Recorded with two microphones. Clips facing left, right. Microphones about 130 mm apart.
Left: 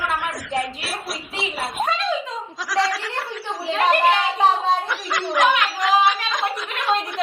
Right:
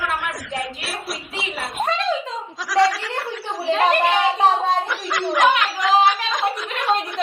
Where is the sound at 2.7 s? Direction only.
Centre (ahead or behind).